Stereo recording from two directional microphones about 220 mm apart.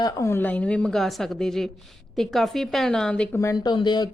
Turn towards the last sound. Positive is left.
turn(degrees=20)  # may be behind; listen again after turning